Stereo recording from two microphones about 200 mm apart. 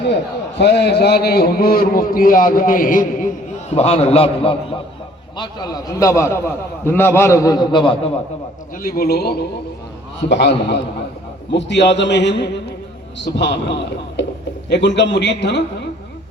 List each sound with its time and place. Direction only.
0.6 s a man's voice: 60° left (ahead or behind); by 8.1 s 25° left (ahead or behind)
8.7 s a man's voice: 45° left (ahead or behind)